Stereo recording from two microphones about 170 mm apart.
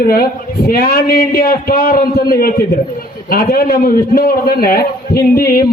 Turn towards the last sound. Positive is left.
turn(degrees=60)  # may be behind; listen again after turning